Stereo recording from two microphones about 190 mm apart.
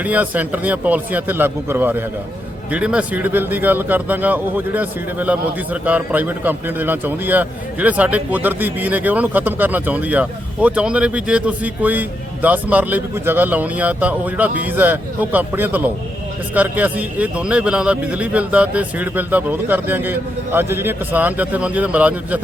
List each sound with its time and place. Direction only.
0.0 s a man's voice: 10° right (ahead or behind)